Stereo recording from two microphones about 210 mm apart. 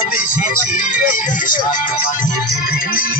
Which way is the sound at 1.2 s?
40° left (ahead or behind).